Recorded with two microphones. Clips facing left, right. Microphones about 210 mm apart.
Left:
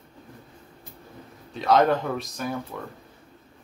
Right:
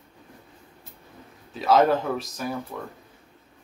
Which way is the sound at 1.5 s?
5° right (ahead or behind).